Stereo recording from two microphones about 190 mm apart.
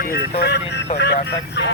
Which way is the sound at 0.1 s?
60° left (ahead or behind).